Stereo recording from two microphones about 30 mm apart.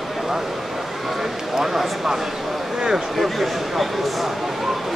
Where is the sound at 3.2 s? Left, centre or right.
Centre.